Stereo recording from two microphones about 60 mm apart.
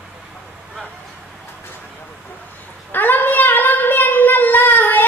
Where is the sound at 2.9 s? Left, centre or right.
Left.